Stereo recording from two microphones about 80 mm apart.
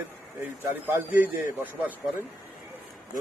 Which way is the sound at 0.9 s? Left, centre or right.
Right.